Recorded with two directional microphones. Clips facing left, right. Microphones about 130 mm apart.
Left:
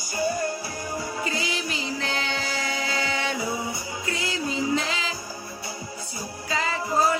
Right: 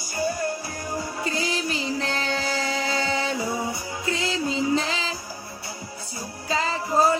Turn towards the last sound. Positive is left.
turn(degrees=-35)  # may be behind; listen again after turning